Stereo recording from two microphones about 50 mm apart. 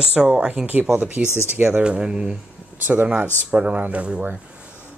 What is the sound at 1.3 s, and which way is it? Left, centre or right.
Speech, left.